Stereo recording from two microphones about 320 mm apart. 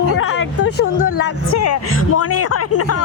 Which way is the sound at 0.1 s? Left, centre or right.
Left.